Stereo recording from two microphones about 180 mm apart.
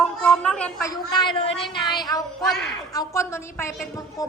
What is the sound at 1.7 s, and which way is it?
A woman's voice, 25° left (ahead or behind).